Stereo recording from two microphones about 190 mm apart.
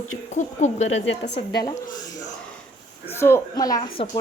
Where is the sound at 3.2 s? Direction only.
15° left (ahead or behind).